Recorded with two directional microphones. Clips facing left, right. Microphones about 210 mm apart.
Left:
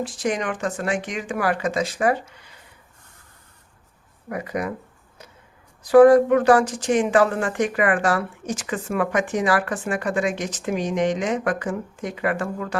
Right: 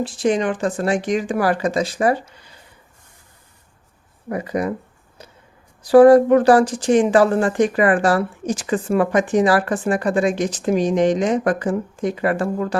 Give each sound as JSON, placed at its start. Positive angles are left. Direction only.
{"t": 0.0, "sound": "speech", "side_deg": -30}
{"t": 4.3, "sound": "speech", "side_deg": -30}
{"t": 5.8, "sound": "speech", "side_deg": -35}